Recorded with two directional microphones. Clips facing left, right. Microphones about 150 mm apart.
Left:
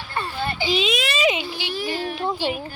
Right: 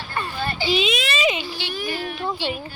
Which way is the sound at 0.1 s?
25° left (ahead or behind).